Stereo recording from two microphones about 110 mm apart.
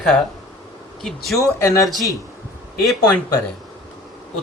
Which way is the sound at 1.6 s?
30° left (ahead or behind).